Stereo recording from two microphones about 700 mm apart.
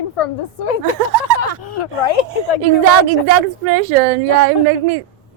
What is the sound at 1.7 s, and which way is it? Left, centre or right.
Speech, left.